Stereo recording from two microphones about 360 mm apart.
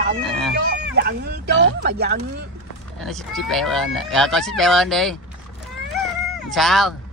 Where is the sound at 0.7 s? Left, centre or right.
Right.